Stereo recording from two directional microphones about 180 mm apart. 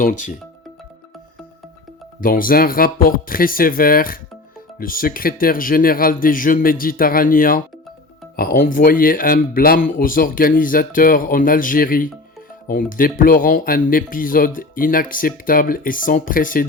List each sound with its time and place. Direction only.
0.0 s speech: 45° left (ahead or behind)
2.2 s speech: 50° left (ahead or behind)